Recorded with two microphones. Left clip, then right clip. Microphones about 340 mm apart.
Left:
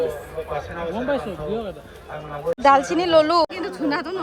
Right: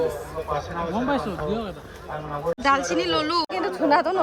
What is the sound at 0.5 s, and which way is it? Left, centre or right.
Speech, right.